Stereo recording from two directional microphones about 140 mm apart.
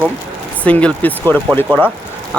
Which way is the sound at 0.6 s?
10° left (ahead or behind).